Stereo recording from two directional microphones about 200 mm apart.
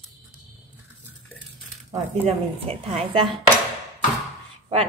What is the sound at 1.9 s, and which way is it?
A woman's voice, 30° right (ahead or behind).